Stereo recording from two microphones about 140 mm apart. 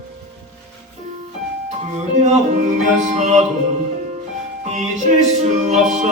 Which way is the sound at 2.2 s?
55° right (ahead or behind).